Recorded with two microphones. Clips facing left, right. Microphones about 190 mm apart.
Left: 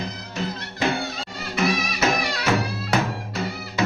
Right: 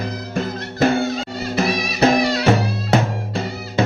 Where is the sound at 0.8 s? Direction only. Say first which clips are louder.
Right 8 dB; 40° right (ahead or behind).